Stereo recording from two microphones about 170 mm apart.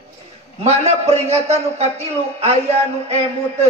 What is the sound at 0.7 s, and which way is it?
A man's voice, 40° right (ahead or behind).